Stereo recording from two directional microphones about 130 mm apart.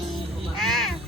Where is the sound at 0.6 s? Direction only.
Centre (ahead or behind).